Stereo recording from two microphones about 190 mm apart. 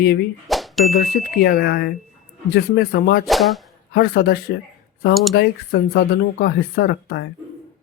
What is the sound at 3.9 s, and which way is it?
Speech, 55° left (ahead or behind).